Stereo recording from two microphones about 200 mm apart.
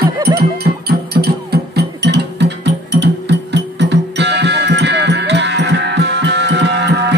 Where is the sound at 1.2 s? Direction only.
55° right (ahead or behind).